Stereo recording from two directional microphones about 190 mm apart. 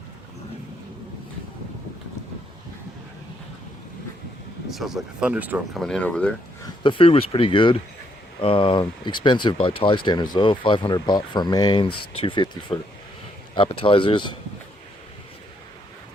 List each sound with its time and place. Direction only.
4.7 s speech: centre (ahead or behind)
5.8 s speech: 5° left (ahead or behind)
6.8 s speech: 30° left (ahead or behind)